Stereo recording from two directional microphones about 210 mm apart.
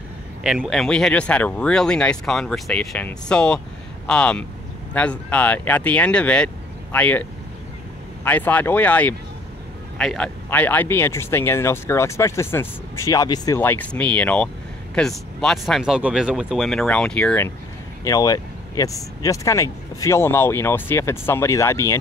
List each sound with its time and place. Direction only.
0.4 s speech: 5° right (ahead or behind)
18.0 s speech: 15° left (ahead or behind)